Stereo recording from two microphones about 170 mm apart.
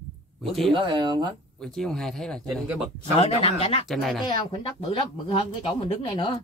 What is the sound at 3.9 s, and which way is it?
Speech, centre (ahead or behind).